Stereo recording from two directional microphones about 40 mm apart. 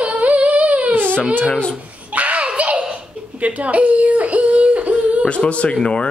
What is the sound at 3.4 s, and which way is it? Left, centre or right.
Yodeling, right.